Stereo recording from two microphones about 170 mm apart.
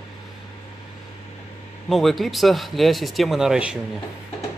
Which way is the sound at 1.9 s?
Centre (ahead or behind).